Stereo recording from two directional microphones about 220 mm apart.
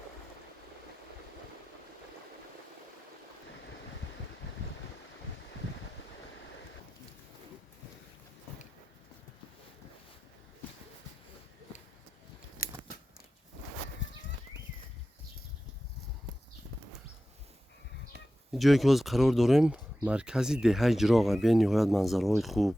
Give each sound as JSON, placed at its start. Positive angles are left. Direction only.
{"t": 12.6, "sound": "scissors", "side_deg": 40}
{"t": 18.5, "sound": "speech", "side_deg": 0}